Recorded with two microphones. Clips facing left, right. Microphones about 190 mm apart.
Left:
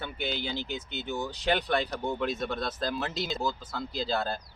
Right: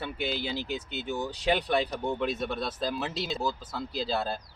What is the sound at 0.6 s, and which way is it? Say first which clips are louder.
Speech: right 2 dB; 35° right (ahead or behind).